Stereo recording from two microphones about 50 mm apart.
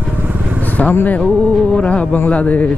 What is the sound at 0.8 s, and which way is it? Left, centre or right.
Speech, left.